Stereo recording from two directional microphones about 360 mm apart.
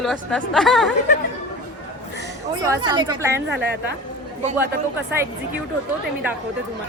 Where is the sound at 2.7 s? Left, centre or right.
Centre.